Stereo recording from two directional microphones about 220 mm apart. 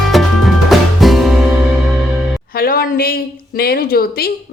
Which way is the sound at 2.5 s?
40° left (ahead or behind).